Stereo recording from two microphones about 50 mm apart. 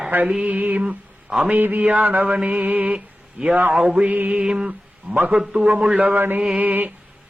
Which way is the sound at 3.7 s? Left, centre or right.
Centre.